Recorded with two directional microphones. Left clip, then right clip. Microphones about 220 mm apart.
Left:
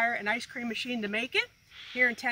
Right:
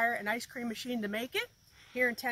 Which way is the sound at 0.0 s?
5° right (ahead or behind).